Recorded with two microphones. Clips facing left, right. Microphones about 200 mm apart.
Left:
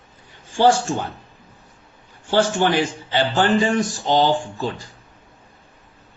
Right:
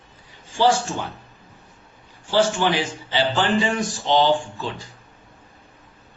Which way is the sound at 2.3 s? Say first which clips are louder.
Left 2 dB; 55° left (ahead or behind).